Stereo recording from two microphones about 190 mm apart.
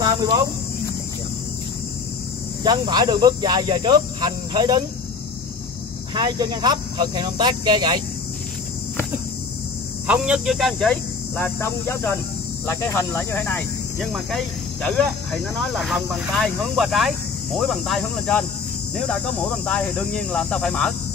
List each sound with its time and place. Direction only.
2.6 s speech: 20° right (ahead or behind)
6.1 s speech: 20° right (ahead or behind)
10.0 s speech: 5° right (ahead or behind)
19.6 s speech: 5° left (ahead or behind)